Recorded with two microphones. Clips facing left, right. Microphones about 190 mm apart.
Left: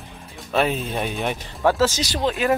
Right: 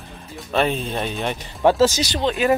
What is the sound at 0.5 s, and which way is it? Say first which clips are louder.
Speech: right 1 dB; 5° left (ahead or behind).